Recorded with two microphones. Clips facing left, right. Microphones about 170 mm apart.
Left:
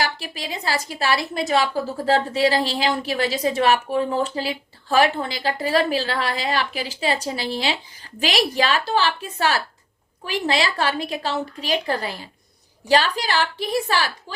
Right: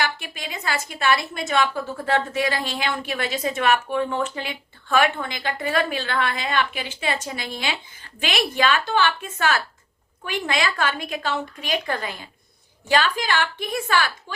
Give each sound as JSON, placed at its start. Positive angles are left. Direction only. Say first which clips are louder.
{"t": 0.0, "sound": "a woman's voice", "louder": "left 1 dB", "side_deg": 35}